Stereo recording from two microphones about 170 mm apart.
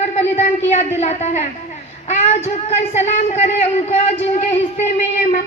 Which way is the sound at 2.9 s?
40° left (ahead or behind).